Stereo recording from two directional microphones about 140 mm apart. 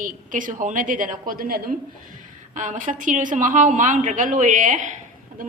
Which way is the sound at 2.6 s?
65° right (ahead or behind).